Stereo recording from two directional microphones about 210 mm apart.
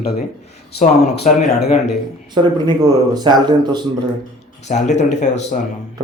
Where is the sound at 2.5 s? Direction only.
20° right (ahead or behind).